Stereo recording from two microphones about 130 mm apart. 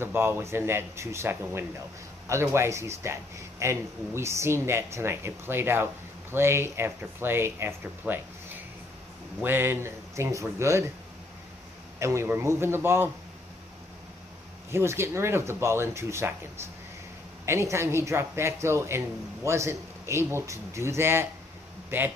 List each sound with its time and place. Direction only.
0.0 s a man's voice: 20° right (ahead or behind)
9.4 s a man's voice: 15° right (ahead or behind)
12.0 s a man's voice: 20° right (ahead or behind)
14.7 s a man's voice: 20° right (ahead or behind)
17.5 s a man's voice: 20° right (ahead or behind)